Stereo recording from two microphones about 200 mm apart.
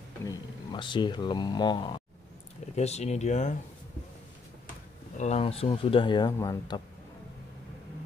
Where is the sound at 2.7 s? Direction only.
35° left (ahead or behind).